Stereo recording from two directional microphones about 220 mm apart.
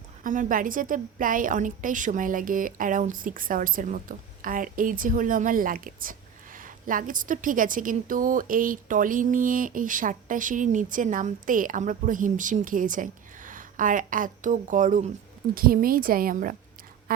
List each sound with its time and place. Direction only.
0.2 s a woman's voice: 35° right (ahead or behind)